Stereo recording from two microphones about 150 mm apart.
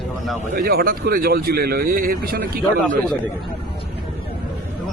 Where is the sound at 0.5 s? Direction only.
85° right.